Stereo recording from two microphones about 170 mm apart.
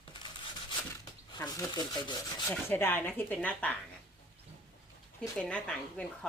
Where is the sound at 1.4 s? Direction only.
25° left (ahead or behind).